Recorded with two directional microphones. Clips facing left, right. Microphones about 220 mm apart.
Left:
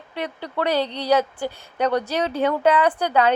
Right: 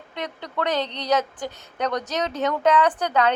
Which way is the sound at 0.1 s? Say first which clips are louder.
Left 3 dB; 10° left (ahead or behind).